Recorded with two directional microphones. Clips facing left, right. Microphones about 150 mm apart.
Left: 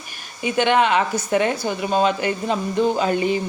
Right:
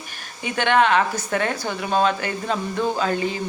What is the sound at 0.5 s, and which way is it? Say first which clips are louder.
Speech: left 1 dB; 10° left (ahead or behind).